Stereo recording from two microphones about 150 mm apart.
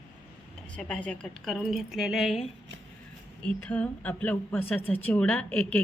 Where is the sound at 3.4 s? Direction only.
10° left (ahead or behind).